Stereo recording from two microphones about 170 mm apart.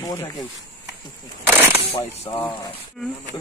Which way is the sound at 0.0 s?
20° left (ahead or behind).